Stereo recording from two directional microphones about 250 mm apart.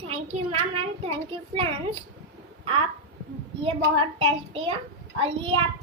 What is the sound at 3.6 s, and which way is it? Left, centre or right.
A child's voice, right.